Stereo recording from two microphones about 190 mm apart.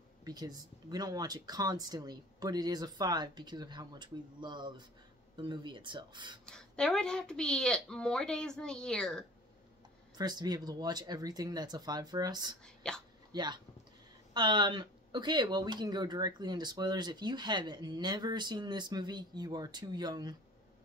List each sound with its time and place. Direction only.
0.2 s speech: 20° right (ahead or behind)
6.4 s a woman's voice: 5° left (ahead or behind)
10.1 s speech: 20° right (ahead or behind)
12.6 s speech: 5° left (ahead or behind)
13.3 s speech: 20° right (ahead or behind)